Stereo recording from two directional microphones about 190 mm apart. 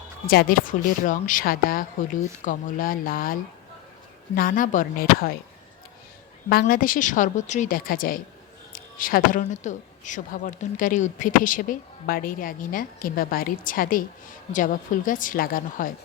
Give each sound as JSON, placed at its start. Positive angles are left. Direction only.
{"t": 0.3, "sound": "speech", "side_deg": 50}
{"t": 4.4, "sound": "speech", "side_deg": 45}
{"t": 6.5, "sound": "speech", "side_deg": 50}